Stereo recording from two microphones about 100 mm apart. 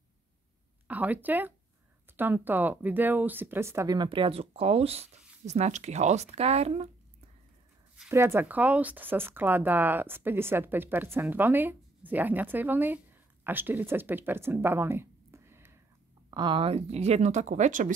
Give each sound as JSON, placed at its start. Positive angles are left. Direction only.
{"t": 0.8, "sound": "speech", "side_deg": -15}
{"t": 3.9, "sound": "speech", "side_deg": -55}
{"t": 8.1, "sound": "speech", "side_deg": -25}
{"t": 16.3, "sound": "speech", "side_deg": -50}